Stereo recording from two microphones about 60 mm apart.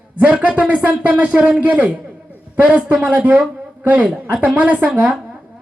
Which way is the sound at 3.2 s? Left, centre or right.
Right.